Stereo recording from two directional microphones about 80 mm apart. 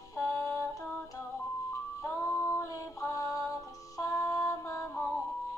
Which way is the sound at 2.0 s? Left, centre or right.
Left.